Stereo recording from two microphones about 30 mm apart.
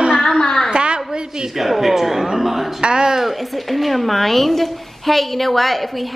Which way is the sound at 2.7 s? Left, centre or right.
Right.